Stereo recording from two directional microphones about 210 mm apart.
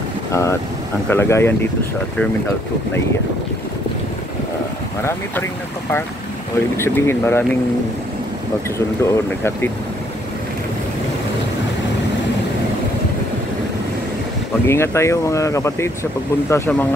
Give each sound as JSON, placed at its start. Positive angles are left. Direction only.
{"t": 0.3, "sound": "speech", "side_deg": 15}
{"t": 6.8, "sound": "speech", "side_deg": 10}
{"t": 8.7, "sound": "speech", "side_deg": 10}
{"t": 14.7, "sound": "speech", "side_deg": 15}